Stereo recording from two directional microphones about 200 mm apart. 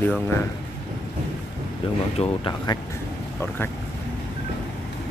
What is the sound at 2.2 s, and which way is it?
Speech, 25° left (ahead or behind).